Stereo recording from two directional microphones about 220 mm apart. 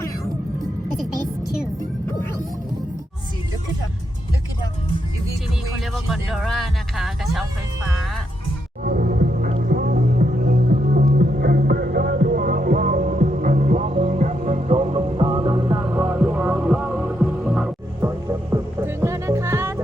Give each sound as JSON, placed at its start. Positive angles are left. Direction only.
{"t": 5.8, "sound": "music", "side_deg": 0}
{"t": 8.8, "sound": "music", "side_deg": -40}
{"t": 15.8, "sound": "music", "side_deg": -10}